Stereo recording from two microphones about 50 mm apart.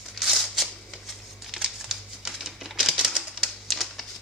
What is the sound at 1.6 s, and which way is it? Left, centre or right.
Typewriter, centre.